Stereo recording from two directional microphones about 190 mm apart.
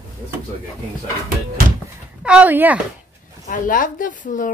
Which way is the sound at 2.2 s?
5° right (ahead or behind).